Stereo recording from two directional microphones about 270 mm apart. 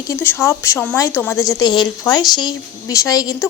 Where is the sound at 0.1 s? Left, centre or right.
Centre.